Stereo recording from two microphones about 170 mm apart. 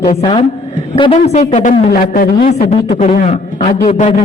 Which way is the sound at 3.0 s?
40° left (ahead or behind).